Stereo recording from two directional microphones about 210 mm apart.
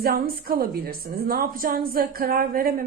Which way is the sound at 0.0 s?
45° right (ahead or behind).